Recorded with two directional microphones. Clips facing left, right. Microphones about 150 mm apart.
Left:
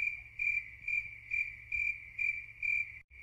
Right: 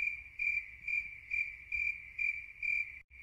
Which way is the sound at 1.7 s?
25° left (ahead or behind).